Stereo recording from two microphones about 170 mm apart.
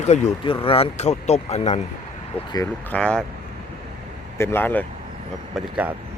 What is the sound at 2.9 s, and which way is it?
Speech, 5° left (ahead or behind).